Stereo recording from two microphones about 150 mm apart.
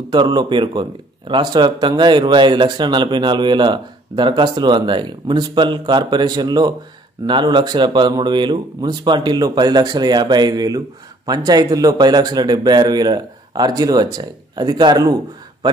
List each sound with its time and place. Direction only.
0.1 s a man's voice: 30° right (ahead or behind)